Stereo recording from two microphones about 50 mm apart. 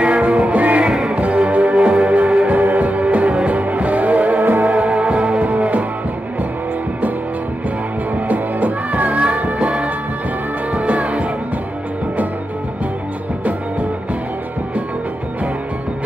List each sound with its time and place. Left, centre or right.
0.0 s music: right
0.8 s music: centre
1.1 s music: right
4.7 s music: right
8.3 s music: right
10.9 s music: right